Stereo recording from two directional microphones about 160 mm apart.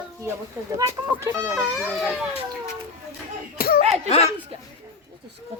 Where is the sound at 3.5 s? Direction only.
70° left (ahead or behind).